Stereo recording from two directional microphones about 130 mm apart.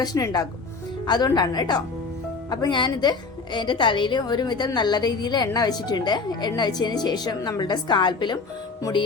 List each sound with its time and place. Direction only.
0.0 s a woman's voice: 25° left (ahead or behind)